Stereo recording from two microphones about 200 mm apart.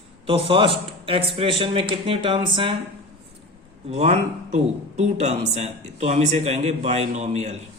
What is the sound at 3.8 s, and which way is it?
Speech, 30° right (ahead or behind).